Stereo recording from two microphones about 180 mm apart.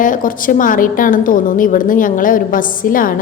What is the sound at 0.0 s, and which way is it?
A woman's voice, 50° left (ahead or behind).